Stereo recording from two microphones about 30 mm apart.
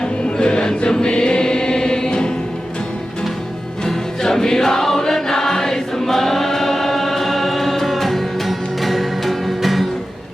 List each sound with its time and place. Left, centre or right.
0.0 s choir: left
3.8 s music: centre